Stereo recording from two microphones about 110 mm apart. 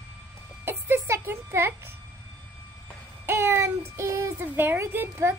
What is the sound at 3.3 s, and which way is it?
A child's voice, 20° right (ahead or behind).